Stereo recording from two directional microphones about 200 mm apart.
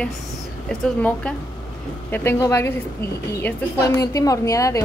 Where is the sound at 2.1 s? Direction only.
10° left (ahead or behind).